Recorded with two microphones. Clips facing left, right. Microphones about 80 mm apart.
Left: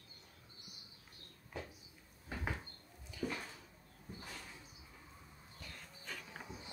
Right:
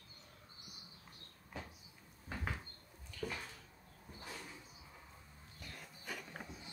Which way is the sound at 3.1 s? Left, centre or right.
Centre.